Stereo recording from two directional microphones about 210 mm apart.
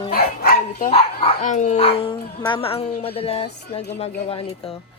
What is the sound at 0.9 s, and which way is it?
A woman's voice, 30° left (ahead or behind).